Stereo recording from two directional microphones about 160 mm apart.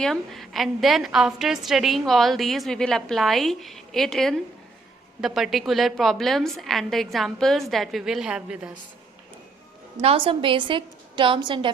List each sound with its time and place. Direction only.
0.0 s a woman's voice: centre (ahead or behind)
10.0 s a woman's voice: 35° right (ahead or behind)